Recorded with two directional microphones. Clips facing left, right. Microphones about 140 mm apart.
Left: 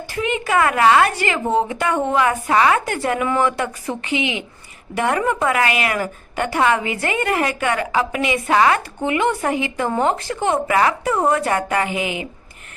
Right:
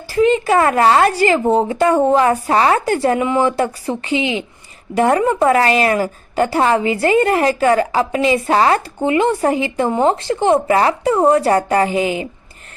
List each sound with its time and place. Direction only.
0.1 s a woman's voice: 35° right (ahead or behind)